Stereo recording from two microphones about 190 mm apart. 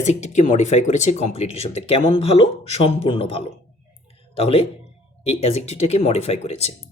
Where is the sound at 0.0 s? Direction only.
40° left (ahead or behind).